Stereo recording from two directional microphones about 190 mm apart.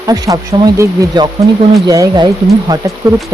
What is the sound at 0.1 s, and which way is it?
Speech, 20° right (ahead or behind).